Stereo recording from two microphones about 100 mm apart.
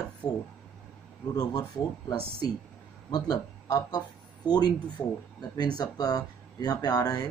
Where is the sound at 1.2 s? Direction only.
40° left (ahead or behind).